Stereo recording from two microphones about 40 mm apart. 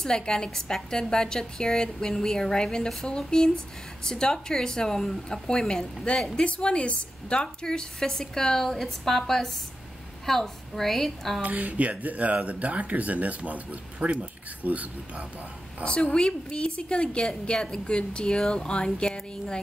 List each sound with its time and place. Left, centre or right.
0.0 s a woman's voice: centre
11.4 s speech: right
15.8 s speech: left